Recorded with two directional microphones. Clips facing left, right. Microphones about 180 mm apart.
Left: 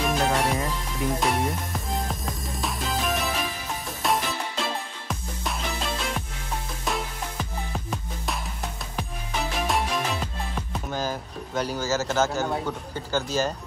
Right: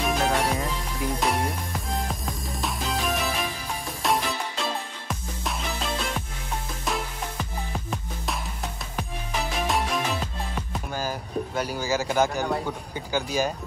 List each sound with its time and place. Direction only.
0.0 s music: centre (ahead or behind)
12.5 s speech: 10° right (ahead or behind)